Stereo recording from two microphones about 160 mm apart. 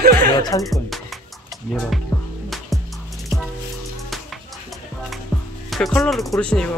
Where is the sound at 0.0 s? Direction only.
70° right (ahead or behind).